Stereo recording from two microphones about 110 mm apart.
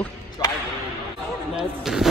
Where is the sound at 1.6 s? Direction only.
5° right (ahead or behind).